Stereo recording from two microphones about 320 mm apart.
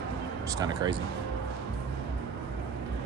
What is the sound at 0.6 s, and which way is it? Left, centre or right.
Speech, centre.